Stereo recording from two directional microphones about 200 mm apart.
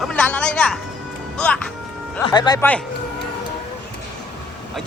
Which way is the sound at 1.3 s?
5° left (ahead or behind).